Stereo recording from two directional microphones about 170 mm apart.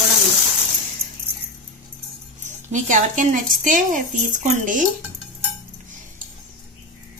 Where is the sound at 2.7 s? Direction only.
50° right (ahead or behind).